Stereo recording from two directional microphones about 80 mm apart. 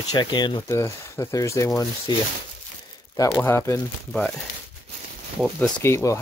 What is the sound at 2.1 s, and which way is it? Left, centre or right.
Speech, left.